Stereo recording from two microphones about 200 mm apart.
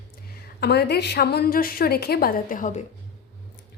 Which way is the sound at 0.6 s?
55° left (ahead or behind).